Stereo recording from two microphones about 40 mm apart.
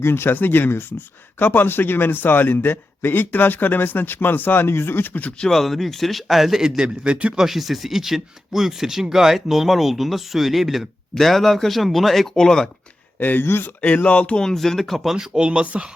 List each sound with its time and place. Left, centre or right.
0.0 s speech: left
0.3 s speech: left
5.5 s speech: centre
6.6 s a man's voice: centre
7.3 s speech: centre
13.1 s speech: left
13.5 s speech: left
13.8 s speech: left
14.3 s speech: centre
15.1 s a man's voice: centre